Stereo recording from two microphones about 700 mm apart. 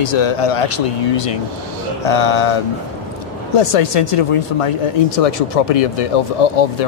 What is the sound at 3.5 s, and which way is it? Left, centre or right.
Speech, left.